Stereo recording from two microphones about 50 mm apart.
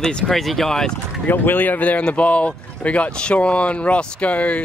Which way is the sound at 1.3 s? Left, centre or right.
Left.